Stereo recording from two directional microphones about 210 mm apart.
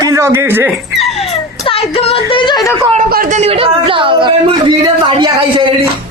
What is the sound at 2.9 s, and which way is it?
Speech, 40° right (ahead or behind).